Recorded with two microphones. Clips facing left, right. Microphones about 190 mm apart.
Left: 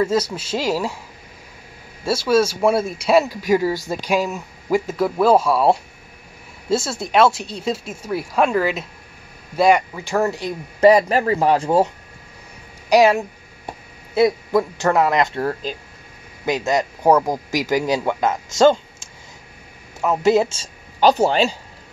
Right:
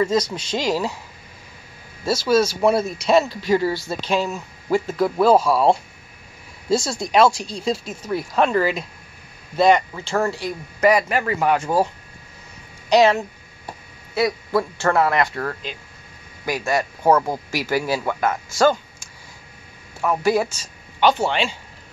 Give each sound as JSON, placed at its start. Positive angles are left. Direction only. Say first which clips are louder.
{"t": 0.0, "sound": "speech", "louder": "left 1 dB", "side_deg": 5}
{"t": 2.6, "sound": "a man's voice", "louder": "even", "side_deg": 5}
{"t": 12.9, "sound": "a man's voice", "louder": "left 1 dB", "side_deg": 15}